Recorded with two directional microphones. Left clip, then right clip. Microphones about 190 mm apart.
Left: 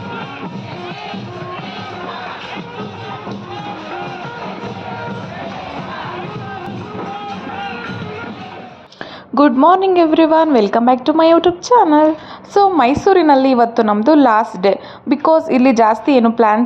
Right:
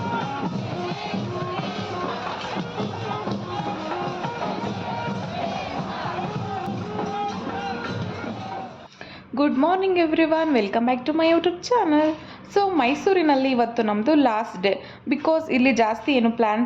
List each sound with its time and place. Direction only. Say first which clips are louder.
9.6 s a woman's voice: left 9 dB; 30° left (ahead or behind)